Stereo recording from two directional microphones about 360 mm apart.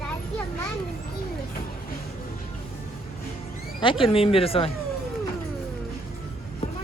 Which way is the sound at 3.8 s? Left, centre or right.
Centre.